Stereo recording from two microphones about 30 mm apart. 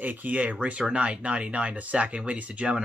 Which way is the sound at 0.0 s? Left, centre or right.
Right.